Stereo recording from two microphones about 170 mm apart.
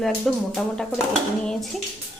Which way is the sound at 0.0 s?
Centre (ahead or behind).